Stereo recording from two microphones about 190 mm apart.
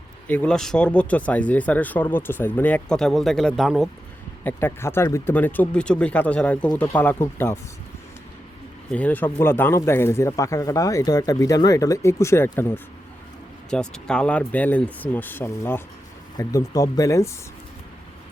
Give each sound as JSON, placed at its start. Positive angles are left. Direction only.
{"t": 0.3, "sound": "speech", "side_deg": 5}
{"t": 4.4, "sound": "speech", "side_deg": 10}
{"t": 8.9, "sound": "speech", "side_deg": 10}